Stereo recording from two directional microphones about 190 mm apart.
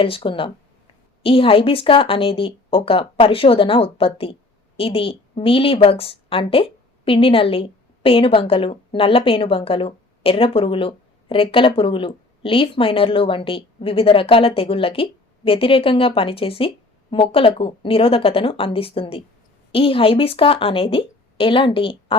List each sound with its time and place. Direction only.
0.0 s a woman's voice: 30° left (ahead or behind)